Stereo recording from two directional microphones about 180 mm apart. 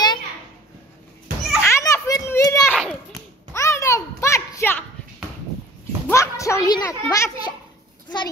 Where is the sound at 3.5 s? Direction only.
15° left (ahead or behind).